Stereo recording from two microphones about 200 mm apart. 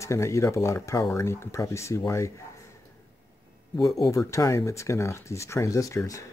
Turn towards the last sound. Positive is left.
turn(degrees=15)  # may be behind; listen again after turning